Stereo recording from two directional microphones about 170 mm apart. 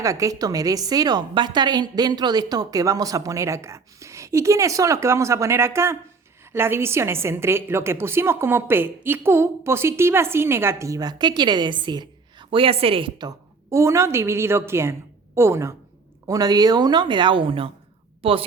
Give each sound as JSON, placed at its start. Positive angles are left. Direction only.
{"t": 0.0, "sound": "a woman's voice", "side_deg": -20}